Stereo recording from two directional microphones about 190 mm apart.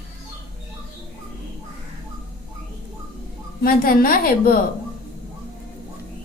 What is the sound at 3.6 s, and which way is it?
Speech, 50° left (ahead or behind).